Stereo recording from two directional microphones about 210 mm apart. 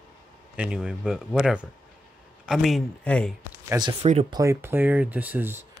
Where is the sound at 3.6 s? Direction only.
15° right (ahead or behind).